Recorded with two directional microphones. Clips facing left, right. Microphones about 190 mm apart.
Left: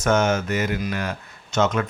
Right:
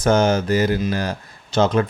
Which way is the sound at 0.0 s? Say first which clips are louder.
Right 3 dB; 35° right (ahead or behind).